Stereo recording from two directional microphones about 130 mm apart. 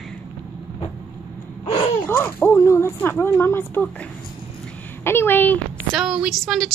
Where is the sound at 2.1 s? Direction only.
15° left (ahead or behind).